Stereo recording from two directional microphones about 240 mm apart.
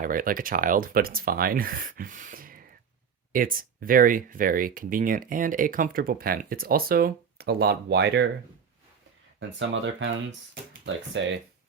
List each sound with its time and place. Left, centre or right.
0.0 s speech: right
9.4 s speech: right